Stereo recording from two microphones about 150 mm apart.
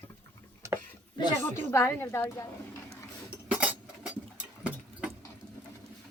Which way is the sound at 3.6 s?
10° right (ahead or behind).